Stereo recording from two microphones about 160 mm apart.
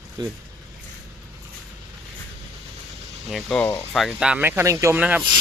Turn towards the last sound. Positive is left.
turn(degrees=-10)  # may be behind; listen again after turning